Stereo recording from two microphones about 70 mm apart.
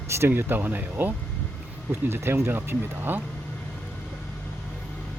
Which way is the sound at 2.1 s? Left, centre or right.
Right.